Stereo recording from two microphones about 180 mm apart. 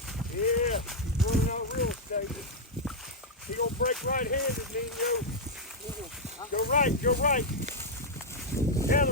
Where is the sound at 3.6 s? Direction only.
55° left (ahead or behind).